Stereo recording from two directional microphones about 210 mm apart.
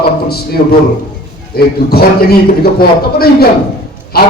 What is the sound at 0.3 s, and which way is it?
A man's voice, 50° left (ahead or behind).